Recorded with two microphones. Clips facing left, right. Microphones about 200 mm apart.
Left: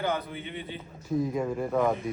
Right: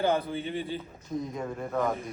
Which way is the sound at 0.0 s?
30° right (ahead or behind).